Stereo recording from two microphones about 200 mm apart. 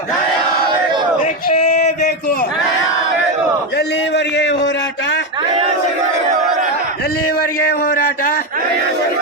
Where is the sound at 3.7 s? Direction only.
55° left (ahead or behind).